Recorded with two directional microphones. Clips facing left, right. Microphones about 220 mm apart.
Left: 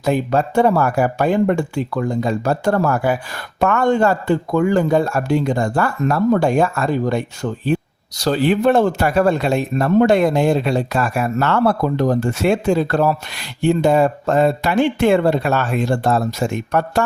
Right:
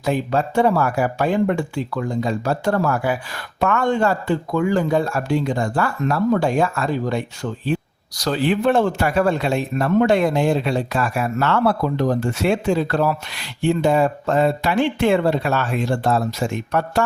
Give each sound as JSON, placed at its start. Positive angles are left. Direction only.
{"t": 0.0, "sound": "speech", "side_deg": 45}